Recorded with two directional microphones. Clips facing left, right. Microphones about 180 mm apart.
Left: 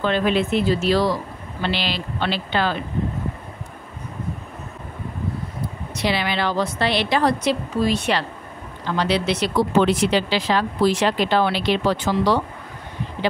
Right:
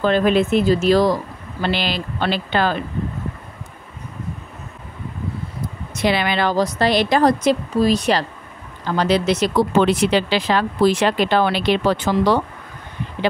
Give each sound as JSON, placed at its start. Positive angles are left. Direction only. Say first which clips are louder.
{"t": 0.0, "sound": "a woman's voice", "louder": "right 4 dB", "side_deg": -45}
{"t": 5.9, "sound": "a woman's voice", "louder": "right 4 dB", "side_deg": -50}
{"t": 9.8, "sound": "speech", "louder": "right 1 dB", "side_deg": -60}